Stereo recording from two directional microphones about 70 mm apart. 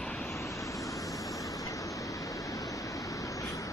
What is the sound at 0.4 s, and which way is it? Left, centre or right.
Vehicle, left.